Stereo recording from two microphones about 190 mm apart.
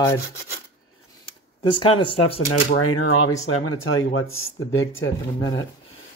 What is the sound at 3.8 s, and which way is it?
Speech, 90° left.